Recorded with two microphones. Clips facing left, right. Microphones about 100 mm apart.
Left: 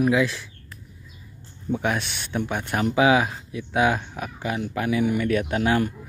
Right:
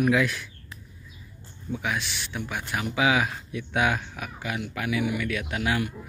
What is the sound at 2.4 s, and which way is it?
Speech, 35° left (ahead or behind).